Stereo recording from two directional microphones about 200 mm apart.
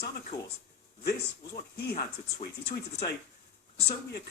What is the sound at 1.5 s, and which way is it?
Speech, 50° left (ahead or behind).